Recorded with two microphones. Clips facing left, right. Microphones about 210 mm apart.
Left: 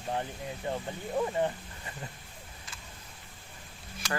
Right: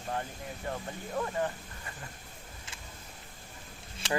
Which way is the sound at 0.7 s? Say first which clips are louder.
Left 3 dB; 20° left (ahead or behind).